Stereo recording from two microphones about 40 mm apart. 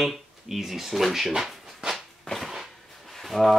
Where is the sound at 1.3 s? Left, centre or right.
Centre.